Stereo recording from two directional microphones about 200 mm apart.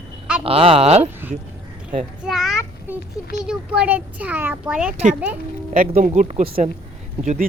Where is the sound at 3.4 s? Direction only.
5° right (ahead or behind).